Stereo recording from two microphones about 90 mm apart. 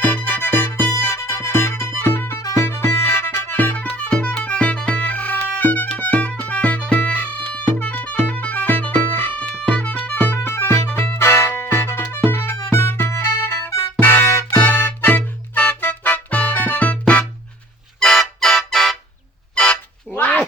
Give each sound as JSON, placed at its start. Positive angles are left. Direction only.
{"t": 0.0, "sound": "music", "side_deg": 15}
{"t": 18.0, "sound": "music", "side_deg": 5}
{"t": 19.5, "sound": "a sound", "side_deg": 10}